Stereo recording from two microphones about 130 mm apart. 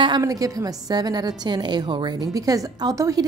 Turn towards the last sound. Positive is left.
turn(degrees=-25)  # may be behind; listen again after turning